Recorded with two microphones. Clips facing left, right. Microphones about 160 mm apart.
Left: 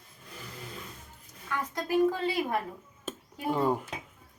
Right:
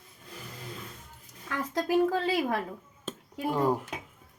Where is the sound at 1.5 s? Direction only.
90° right.